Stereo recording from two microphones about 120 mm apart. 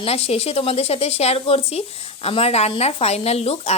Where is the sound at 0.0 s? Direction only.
60° left (ahead or behind).